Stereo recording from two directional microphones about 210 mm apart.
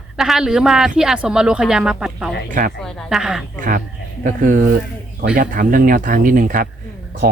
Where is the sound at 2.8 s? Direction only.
5° right (ahead or behind).